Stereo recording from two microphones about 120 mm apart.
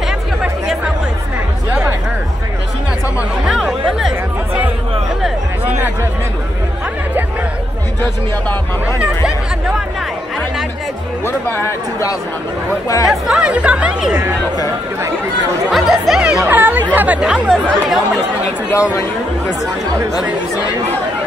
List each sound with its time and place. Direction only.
0.4 s chatter: 5° right (ahead or behind)
3.2 s music: 5° right (ahead or behind)
8.8 s hubbub: 10° right (ahead or behind)
11.2 s chatter: 20° left (ahead or behind)
13.1 s music: 10° right (ahead or behind)
15.7 s chatter: 5° right (ahead or behind)
16.4 s chatter: 15° right (ahead or behind); by 18.2 s centre (ahead or behind)
18.7 s speech: 25° left (ahead or behind)